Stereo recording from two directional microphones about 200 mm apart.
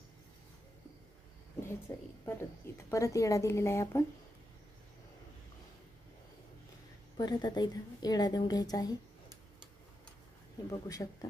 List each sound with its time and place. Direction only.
1.9 s a woman's voice: 15° left (ahead or behind)
7.2 s a woman's voice: 20° left (ahead or behind)
10.7 s a woman's voice: 15° left (ahead or behind)